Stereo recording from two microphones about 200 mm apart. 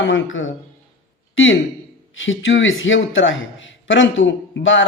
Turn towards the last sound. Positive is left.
turn(degrees=70)  # may be behind; listen again after turning